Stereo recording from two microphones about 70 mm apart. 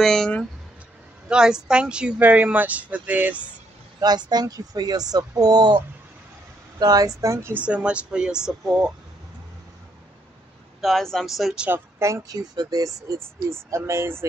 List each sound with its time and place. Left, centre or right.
0.0 s speech: centre
1.3 s speech: centre
4.0 s speech: right
6.8 s speech: right
7.6 s speech: centre
10.8 s speech: centre
12.0 s speech: right
12.4 s speech: right
13.2 s speech: right